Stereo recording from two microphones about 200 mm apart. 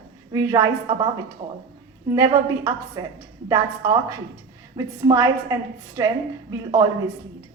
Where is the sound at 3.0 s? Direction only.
15° right (ahead or behind).